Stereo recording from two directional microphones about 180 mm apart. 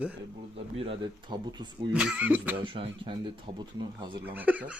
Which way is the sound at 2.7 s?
30° right (ahead or behind).